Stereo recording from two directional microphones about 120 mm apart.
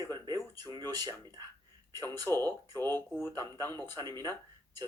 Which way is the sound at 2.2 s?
20° left (ahead or behind).